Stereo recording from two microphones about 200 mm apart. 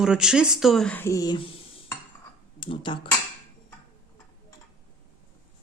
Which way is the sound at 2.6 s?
25° left (ahead or behind).